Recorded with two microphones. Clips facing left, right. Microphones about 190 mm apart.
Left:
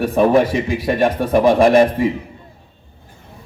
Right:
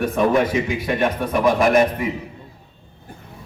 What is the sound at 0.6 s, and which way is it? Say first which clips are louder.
A man's voice: left 4 dB; 30° left (ahead or behind).